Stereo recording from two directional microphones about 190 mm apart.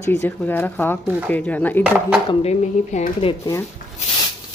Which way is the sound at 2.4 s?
35° left (ahead or behind).